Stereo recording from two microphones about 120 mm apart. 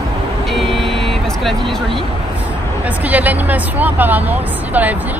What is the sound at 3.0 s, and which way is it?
Speech, 15° right (ahead or behind).